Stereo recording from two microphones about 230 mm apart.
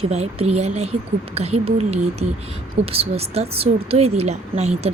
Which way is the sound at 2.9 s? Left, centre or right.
Right.